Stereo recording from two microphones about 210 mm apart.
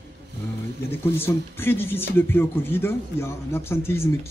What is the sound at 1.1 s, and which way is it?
Speech, 10° left (ahead or behind).